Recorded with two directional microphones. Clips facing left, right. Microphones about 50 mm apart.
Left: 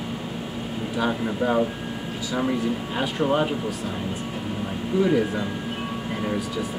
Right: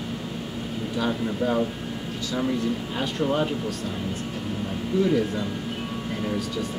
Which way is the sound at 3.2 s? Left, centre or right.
Left.